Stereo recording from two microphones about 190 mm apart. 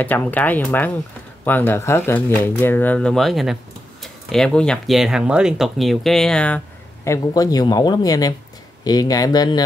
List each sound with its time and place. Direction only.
0.0 s speech: 10° left (ahead or behind)
7.1 s speech: 20° left (ahead or behind)